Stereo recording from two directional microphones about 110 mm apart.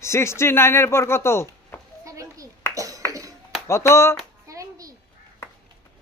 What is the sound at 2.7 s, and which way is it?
Clapping, 30° right (ahead or behind).